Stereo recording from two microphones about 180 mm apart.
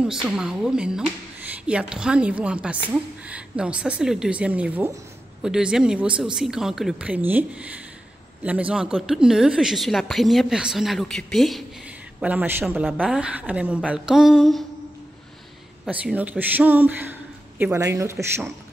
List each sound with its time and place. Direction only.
0.0 s a woman's voice: 5° right (ahead or behind)
15.9 s a man's voice: 10° right (ahead or behind)